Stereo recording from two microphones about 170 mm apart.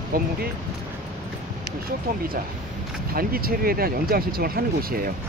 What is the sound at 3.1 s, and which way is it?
Speech, 60° right (ahead or behind).